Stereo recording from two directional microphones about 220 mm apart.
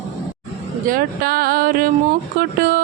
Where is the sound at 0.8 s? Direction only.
40° right (ahead or behind).